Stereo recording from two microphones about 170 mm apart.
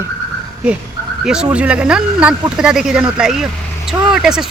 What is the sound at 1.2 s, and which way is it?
Speech, 5° right (ahead or behind).